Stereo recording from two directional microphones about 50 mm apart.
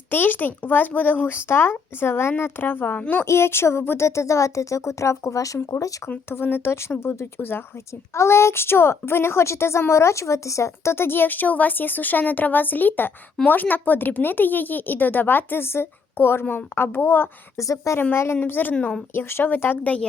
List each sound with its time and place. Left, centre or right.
0.1 s speech: left
1.4 s speech: left
3.2 s speech: left
6.3 s speech: left
8.1 s a woman's voice: left
10.9 s speech: left
17.6 s a woman's voice: left
18.1 s a woman's voice: left
18.3 s speech: left
19.1 s speech: left